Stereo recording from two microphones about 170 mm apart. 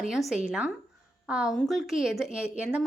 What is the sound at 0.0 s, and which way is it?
A woman's voice, centre (ahead or behind).